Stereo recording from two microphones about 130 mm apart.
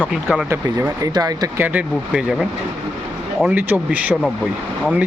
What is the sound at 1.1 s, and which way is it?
Speech, 30° right (ahead or behind).